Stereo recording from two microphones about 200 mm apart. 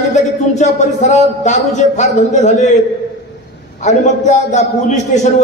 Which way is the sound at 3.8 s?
35° left (ahead or behind).